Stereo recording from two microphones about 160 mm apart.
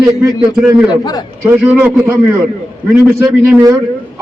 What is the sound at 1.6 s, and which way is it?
Speech, 10° right (ahead or behind).